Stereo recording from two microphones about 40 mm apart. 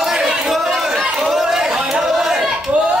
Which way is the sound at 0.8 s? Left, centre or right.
Centre.